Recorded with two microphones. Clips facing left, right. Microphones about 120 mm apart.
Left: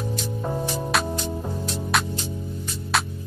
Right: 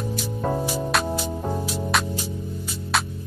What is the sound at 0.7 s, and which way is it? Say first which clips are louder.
Music: right 1 dB; 5° right (ahead or behind).